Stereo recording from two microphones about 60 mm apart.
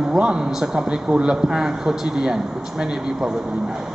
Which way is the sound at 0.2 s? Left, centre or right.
Centre.